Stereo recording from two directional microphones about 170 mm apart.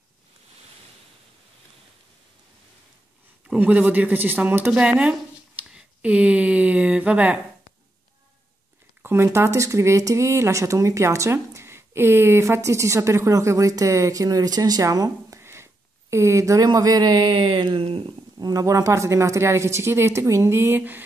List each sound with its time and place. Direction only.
3.4 s speech: 10° right (ahead or behind)
9.0 s speech: 15° right (ahead or behind)